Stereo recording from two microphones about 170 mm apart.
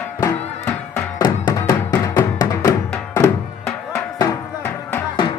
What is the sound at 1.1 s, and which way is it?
Music, 20° left (ahead or behind).